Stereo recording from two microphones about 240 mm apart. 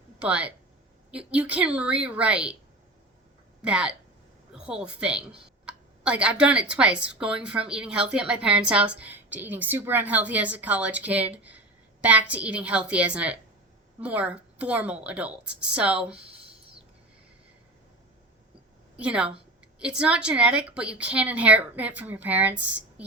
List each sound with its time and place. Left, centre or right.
0.2 s a woman's voice: centre
3.6 s a woman's voice: centre
18.9 s a woman's voice: centre